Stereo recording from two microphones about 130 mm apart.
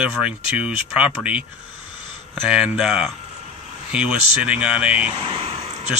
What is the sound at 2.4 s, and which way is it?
Speech, 10° right (ahead or behind).